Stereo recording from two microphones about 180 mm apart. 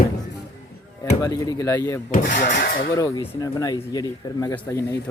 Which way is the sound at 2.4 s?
50° left (ahead or behind).